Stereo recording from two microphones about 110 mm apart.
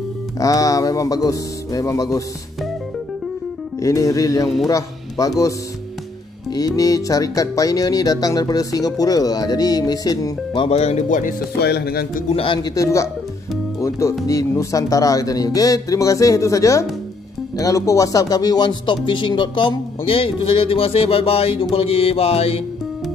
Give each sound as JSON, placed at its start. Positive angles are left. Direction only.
{"t": 0.4, "sound": "speech", "side_deg": 30}
{"t": 3.8, "sound": "speech", "side_deg": 30}
{"t": 6.5, "sound": "speech", "side_deg": 35}
{"t": 10.5, "sound": "speech", "side_deg": 50}
{"t": 10.8, "sound": "speech", "side_deg": 75}
{"t": 12.7, "sound": "speech", "side_deg": 30}